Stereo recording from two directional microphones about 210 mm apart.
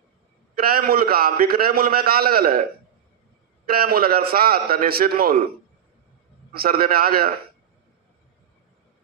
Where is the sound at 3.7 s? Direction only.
45° right (ahead or behind).